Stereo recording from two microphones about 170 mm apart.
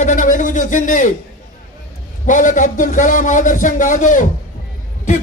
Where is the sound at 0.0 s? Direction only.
50° left (ahead or behind).